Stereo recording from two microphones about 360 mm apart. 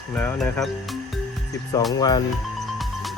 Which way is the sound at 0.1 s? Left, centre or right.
Centre.